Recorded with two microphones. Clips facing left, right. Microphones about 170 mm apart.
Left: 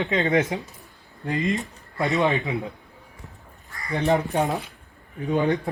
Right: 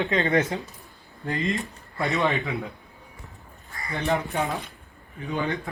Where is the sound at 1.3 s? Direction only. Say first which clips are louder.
Left 2 dB; 20° left (ahead or behind).